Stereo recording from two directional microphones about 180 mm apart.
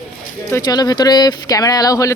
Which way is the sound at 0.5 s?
20° left (ahead or behind).